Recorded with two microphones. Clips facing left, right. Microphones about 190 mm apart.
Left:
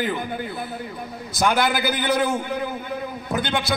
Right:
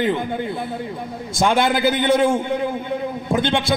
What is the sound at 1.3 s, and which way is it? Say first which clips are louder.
A man's voice: right 3 dB; 25° right (ahead or behind).